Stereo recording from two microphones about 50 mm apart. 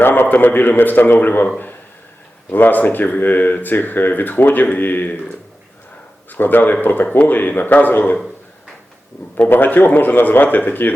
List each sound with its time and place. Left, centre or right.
0.0 s speech: left
2.5 s speech: left
6.3 s speech: left
9.5 s speech: left